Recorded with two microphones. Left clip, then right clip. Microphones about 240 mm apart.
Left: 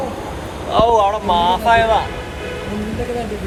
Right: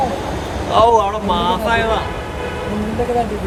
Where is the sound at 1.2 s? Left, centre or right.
Centre.